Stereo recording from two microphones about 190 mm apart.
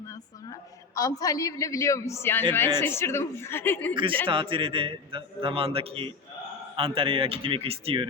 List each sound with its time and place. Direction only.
0.9 s a man's voice: 20° left (ahead or behind)
4.3 s a man's voice: 25° right (ahead or behind)